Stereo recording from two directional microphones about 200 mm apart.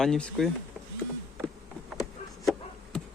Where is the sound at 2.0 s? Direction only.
Centre (ahead or behind).